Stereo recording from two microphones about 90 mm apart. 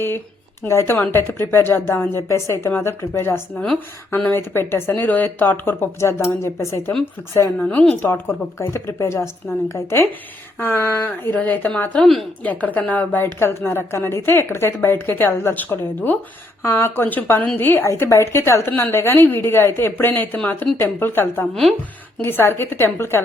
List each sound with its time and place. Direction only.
0.6 s a woman's voice: 30° left (ahead or behind)
7.6 s a woman's voice: 15° left (ahead or behind)
8.1 s a woman's voice: 30° left (ahead or behind)
21.5 s speech: centre (ahead or behind)
22.2 s a woman's voice: 25° left (ahead or behind)